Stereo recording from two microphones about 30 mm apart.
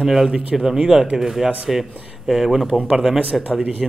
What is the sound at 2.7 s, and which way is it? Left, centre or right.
Speech, right.